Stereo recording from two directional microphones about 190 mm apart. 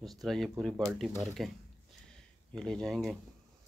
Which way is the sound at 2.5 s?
5° left (ahead or behind).